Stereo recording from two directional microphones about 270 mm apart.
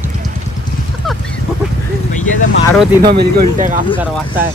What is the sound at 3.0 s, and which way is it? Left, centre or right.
Speech, right.